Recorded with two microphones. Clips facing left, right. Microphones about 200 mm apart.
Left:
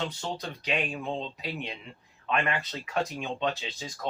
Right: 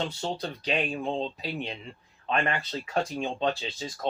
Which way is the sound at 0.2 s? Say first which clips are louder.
Right 3 dB; 35° right (ahead or behind).